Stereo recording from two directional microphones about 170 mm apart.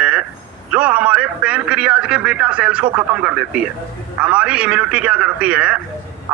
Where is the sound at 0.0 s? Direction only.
5° right (ahead or behind).